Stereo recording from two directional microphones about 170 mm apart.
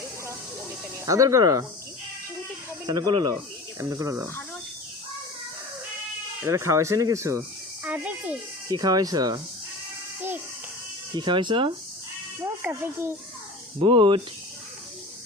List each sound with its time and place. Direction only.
1.0 s speech: 20° right (ahead or behind)
2.8 s speech: 20° right (ahead or behind)
6.4 s speech: 15° right (ahead or behind)
8.7 s speech: 20° right (ahead or behind)
10.2 s a child's voice: 10° right (ahead or behind)
11.1 s speech: 25° right (ahead or behind)
12.6 s speech: 15° right (ahead or behind)
13.7 s speech: 30° right (ahead or behind)